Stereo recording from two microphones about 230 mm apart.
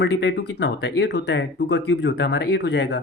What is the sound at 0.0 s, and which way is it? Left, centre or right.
Speech, left.